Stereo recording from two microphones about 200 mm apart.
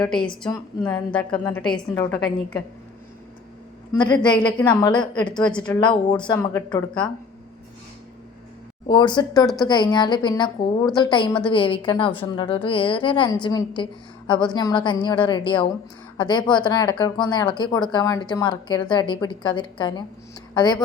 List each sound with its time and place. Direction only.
1.1 s a woman's voice: 5° left (ahead or behind)
4.2 s a woman's voice: 20° left (ahead or behind)
5.2 s a woman's voice: 5° left (ahead or behind)
5.7 s a woman's voice: 20° left (ahead or behind)
8.9 s a woman's voice: 20° left (ahead or behind)